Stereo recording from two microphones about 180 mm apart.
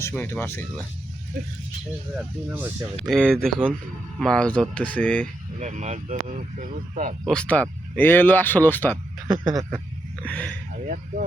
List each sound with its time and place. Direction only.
0.0 s speech: 15° left (ahead or behind)
2.1 s speech: 10° right (ahead or behind)
3.1 s speech: 5° left (ahead or behind)
5.5 s speech: 40° right (ahead or behind)
7.3 s speech: 5° left (ahead or behind)
9.2 s speech: 25° right (ahead or behind)
10.2 s speech: 5° left (ahead or behind)
10.8 s speech: 45° right (ahead or behind)